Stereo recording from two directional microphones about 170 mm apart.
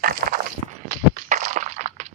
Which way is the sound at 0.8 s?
50° right (ahead or behind).